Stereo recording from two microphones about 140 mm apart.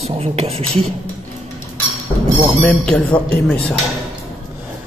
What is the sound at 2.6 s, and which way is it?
Speech, 10° left (ahead or behind).